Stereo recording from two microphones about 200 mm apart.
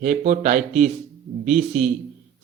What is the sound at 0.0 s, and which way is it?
Speech, 45° right (ahead or behind).